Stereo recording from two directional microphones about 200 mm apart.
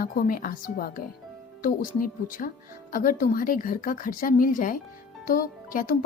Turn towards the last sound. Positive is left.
turn(degrees=40)  # may be behind; listen again after turning